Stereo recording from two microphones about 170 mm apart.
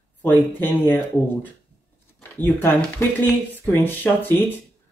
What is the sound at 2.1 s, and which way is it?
Speech, 10° left (ahead or behind).